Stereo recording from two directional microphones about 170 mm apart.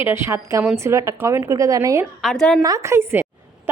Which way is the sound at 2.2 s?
Centre (ahead or behind).